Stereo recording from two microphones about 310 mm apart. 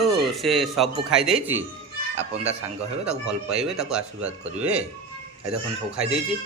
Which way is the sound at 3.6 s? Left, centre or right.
Centre.